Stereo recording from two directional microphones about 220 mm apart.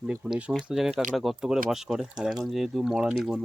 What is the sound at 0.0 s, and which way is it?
Speech, 5° right (ahead or behind).